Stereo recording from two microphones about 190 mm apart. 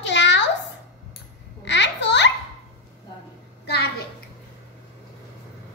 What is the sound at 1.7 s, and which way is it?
Babbling, 65° left (ahead or behind).